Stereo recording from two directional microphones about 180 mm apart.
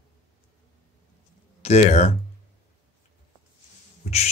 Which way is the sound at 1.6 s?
35° left (ahead or behind).